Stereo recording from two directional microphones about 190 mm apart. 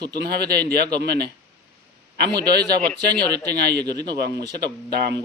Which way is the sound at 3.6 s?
60° right (ahead or behind).